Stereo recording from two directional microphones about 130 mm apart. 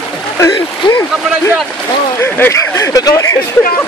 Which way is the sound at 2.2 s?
20° left (ahead or behind).